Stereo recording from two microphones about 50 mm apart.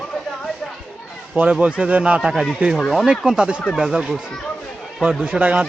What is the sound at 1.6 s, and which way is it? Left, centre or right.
Speech, right.